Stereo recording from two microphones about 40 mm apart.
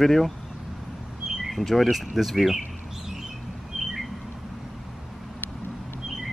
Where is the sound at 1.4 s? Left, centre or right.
Centre.